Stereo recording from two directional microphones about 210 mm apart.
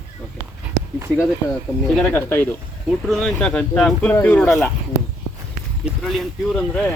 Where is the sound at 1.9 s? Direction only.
10° left (ahead or behind).